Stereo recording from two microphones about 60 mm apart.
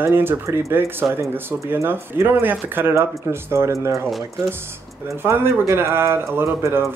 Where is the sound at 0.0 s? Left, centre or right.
Right.